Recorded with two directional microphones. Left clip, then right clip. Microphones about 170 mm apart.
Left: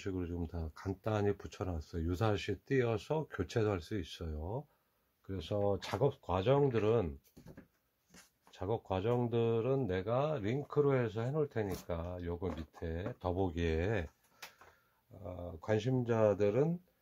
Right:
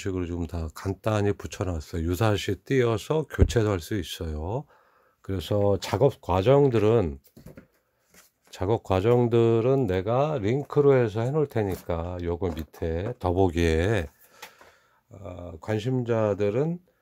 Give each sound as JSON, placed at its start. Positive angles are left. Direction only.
{"t": 0.0, "sound": "speech", "side_deg": -60}
{"t": 5.2, "sound": "speech", "side_deg": -85}
{"t": 8.5, "sound": "speech", "side_deg": -90}
{"t": 15.2, "sound": "speech", "side_deg": -30}